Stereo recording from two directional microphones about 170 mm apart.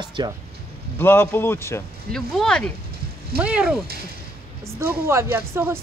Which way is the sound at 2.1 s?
5° left (ahead or behind).